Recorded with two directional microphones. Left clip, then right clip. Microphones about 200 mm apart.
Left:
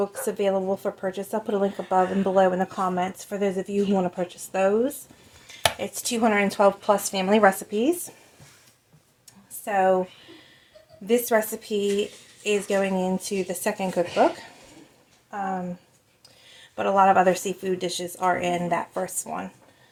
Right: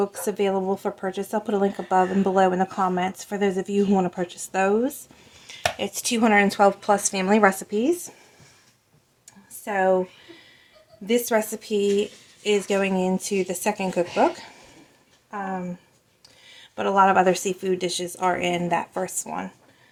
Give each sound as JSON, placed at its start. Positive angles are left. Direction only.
{"t": 0.0, "sound": "speech", "side_deg": -25}
{"t": 9.6, "sound": "speech", "side_deg": -25}
{"t": 11.0, "sound": "speech", "side_deg": -25}
{"t": 16.7, "sound": "speech", "side_deg": -25}